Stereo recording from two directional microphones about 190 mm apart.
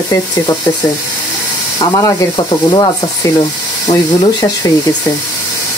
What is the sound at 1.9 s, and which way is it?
Speech, 20° left (ahead or behind).